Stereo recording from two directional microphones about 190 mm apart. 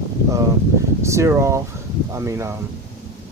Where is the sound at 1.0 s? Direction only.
15° right (ahead or behind).